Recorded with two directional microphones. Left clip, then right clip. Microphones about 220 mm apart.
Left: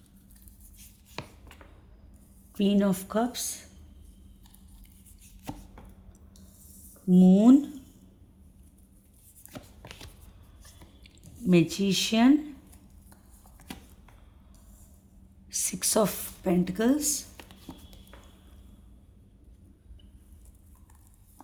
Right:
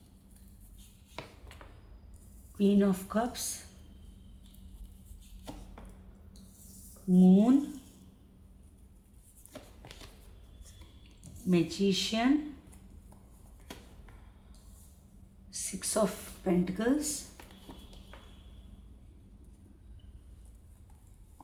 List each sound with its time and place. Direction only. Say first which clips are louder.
2.6 s speech: left 2 dB; 50° left (ahead or behind)
7.1 s speech: left 5 dB; 45° left (ahead or behind)
9.5 s a sound: left 4 dB; 25° left (ahead or behind)
11.4 s speech: left 4 dB; 50° left (ahead or behind)
15.4 s a woman's voice: left 8 dB; 50° left (ahead or behind)